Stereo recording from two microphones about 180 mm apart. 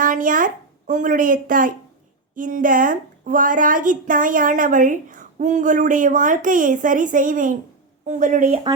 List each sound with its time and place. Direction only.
0.0 s a woman's voice: 45° right (ahead or behind)